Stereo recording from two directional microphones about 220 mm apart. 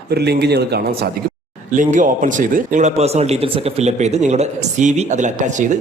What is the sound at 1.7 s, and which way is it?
Speech, 35° right (ahead or behind).